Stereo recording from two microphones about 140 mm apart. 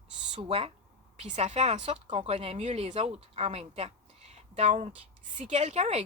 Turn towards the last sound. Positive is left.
turn(degrees=-50)  # may be behind; listen again after turning